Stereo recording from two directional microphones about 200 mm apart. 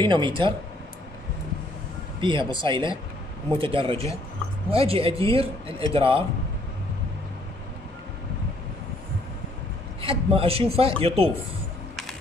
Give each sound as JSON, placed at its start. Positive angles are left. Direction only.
{"t": 0.0, "sound": "speech", "side_deg": -25}
{"t": 2.1, "sound": "speech", "side_deg": -25}
{"t": 10.0, "sound": "speech", "side_deg": -30}